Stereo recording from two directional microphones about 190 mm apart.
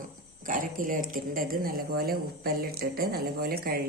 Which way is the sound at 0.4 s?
45° right (ahead or behind).